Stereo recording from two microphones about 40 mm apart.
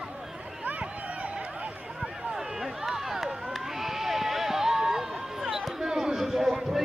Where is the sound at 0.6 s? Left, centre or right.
Right.